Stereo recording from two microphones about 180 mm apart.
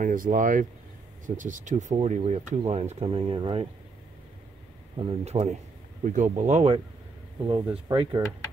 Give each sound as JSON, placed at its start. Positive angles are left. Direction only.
{"t": 0.0, "sound": "speech", "side_deg": -50}
{"t": 5.2, "sound": "speech", "side_deg": -35}
{"t": 7.4, "sound": "speech", "side_deg": -25}